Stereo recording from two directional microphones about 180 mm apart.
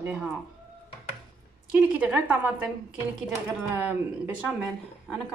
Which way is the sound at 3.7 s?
10° right (ahead or behind).